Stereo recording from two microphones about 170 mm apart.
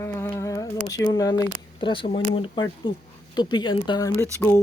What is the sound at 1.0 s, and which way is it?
Speech, 20° left (ahead or behind).